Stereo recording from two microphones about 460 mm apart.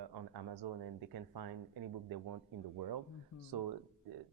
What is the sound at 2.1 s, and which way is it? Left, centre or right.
Speech, right.